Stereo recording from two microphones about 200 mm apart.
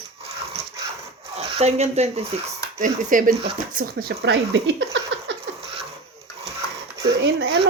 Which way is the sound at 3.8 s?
50° right (ahead or behind).